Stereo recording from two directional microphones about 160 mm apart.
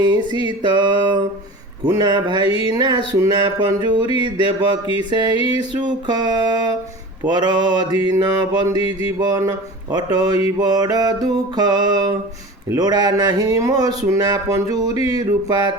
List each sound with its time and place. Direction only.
0.0 s music: 25° right (ahead or behind)
8.8 s music: 35° left (ahead or behind)
9.2 s music: 25° right (ahead or behind)